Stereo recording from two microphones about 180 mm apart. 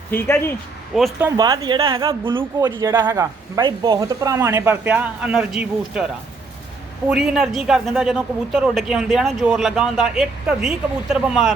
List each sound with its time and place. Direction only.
0.1 s speech: 15° left (ahead or behind)
0.9 s a man's voice: centre (ahead or behind)
1.4 s a woman's voice: 25° right (ahead or behind); by 6.1 s 5° right (ahead or behind)
7.1 s a man's voice: 5° right (ahead or behind)